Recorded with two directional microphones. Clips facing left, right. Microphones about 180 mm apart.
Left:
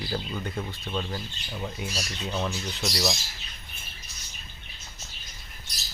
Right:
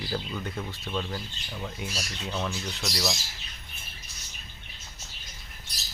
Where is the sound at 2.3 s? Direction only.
15° left (ahead or behind).